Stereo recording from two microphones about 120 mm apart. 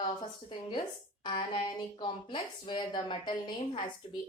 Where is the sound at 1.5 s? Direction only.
40° left (ahead or behind).